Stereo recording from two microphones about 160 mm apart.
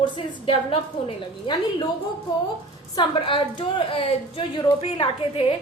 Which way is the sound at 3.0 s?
30° left (ahead or behind).